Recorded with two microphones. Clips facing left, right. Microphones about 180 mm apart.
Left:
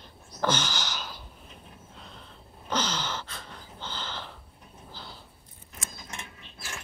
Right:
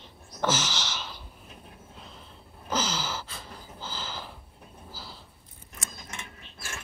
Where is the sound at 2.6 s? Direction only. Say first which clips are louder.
Even; 5° right (ahead or behind).